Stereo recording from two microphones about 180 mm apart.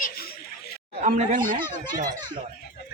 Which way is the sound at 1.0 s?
45° right (ahead or behind).